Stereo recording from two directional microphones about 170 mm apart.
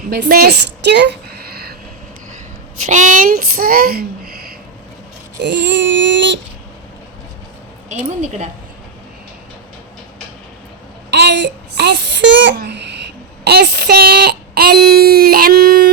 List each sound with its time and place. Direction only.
0.1 s a woman's voice: 65° right (ahead or behind)
2.8 s a child's voice: 45° right (ahead or behind)
5.4 s a sound: 90° right
7.9 s speech: 45° right (ahead or behind)
11.1 s a child's voice: 90° right; by 15.9 s 60° right (ahead or behind)